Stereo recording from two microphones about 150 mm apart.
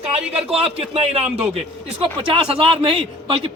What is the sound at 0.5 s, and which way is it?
Speech, 40° right (ahead or behind).